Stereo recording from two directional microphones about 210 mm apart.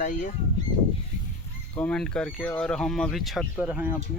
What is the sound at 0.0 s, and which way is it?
Speech, 40° left (ahead or behind).